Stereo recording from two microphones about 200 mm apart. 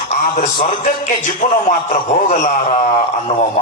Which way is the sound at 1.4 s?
30° left (ahead or behind).